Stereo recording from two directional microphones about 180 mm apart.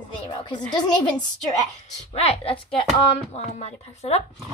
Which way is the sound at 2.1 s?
35° left (ahead or behind).